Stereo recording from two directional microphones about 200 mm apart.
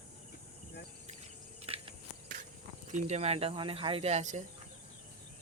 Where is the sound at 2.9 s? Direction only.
35° right (ahead or behind).